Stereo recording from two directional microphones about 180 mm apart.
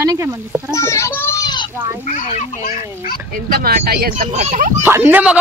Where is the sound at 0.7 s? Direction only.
15° left (ahead or behind).